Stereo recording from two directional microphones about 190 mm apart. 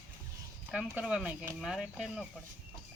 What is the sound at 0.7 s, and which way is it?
Speech, 5° right (ahead or behind).